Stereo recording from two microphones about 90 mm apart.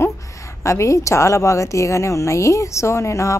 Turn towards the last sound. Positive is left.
turn(degrees=30)  # may be behind; listen again after turning